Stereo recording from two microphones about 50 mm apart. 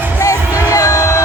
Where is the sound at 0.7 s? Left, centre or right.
Left.